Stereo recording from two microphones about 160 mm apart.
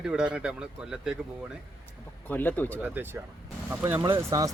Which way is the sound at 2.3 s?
10° left (ahead or behind).